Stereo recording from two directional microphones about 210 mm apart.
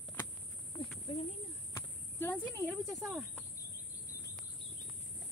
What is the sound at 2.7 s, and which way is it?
Speech, centre (ahead or behind).